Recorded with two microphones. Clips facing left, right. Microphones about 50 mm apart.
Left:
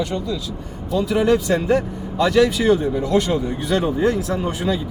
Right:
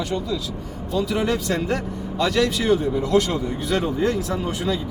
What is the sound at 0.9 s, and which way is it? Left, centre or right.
A man's voice, centre.